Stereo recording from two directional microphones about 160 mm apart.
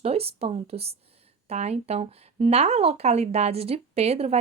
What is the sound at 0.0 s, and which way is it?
A woman's voice, 40° right (ahead or behind).